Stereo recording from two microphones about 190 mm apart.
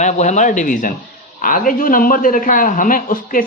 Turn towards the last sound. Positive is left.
turn(degrees=45)  # may be behind; listen again after turning